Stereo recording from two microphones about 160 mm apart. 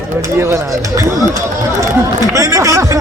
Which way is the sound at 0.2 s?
15° right (ahead or behind).